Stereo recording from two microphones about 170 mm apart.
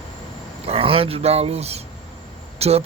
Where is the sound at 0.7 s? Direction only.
35° right (ahead or behind).